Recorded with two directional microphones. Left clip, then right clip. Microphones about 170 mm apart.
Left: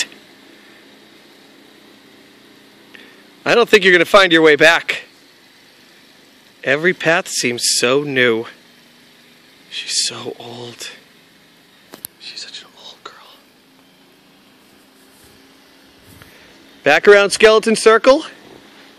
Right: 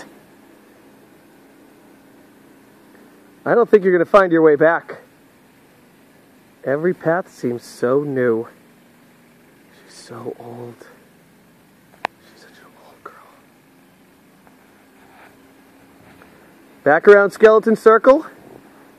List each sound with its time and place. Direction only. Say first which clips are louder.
3.4 s speech: left 3 dB; 40° left (ahead or behind)
6.6 s speech: left 4 dB; 40° left (ahead or behind)
10.0 s speech: left 6 dB; 35° left (ahead or behind)
12.3 s whispering: left 13 dB; 5° left (ahead or behind)
16.8 s speech: left 1 dB; 35° left (ahead or behind)